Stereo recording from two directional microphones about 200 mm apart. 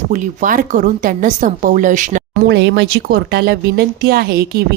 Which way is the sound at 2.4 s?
60° right (ahead or behind).